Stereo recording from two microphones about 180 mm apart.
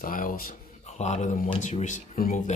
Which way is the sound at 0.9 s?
40° left (ahead or behind).